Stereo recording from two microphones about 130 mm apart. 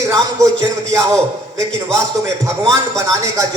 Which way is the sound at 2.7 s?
25° right (ahead or behind).